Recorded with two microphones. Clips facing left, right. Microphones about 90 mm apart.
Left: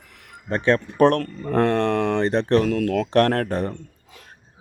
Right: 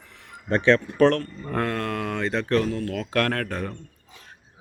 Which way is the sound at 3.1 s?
30° left (ahead or behind).